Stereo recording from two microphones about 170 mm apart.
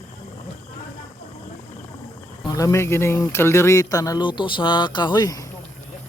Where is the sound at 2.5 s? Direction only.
20° left (ahead or behind).